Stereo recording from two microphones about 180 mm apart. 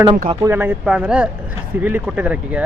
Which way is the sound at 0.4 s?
10° right (ahead or behind).